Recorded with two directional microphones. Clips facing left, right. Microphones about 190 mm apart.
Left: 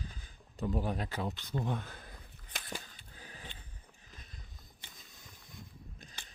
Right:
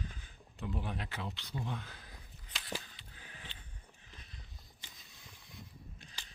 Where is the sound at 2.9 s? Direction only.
40° left (ahead or behind).